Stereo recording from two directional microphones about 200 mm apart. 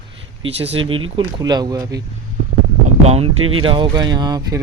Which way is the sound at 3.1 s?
30° right (ahead or behind).